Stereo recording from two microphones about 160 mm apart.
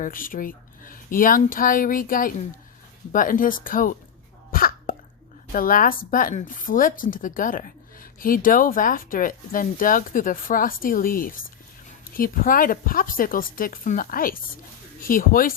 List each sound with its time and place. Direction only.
0.0 s speech: 60° left (ahead or behind)
4.5 s cough: 65° left (ahead or behind)
5.5 s speech: 60° left (ahead or behind)